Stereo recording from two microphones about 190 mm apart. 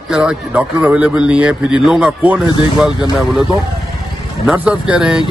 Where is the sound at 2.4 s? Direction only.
25° left (ahead or behind).